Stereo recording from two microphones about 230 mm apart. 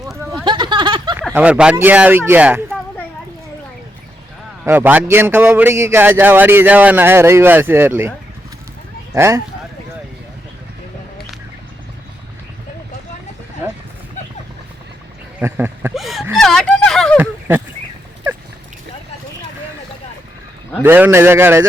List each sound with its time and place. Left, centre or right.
0.4 s a sound: centre
1.3 s a man's voice: centre
4.6 s a man's voice: centre
9.1 s a man's voice: centre
15.4 s a sound: centre
20.8 s a man's voice: centre